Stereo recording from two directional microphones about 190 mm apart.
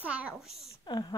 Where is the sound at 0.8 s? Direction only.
20° left (ahead or behind).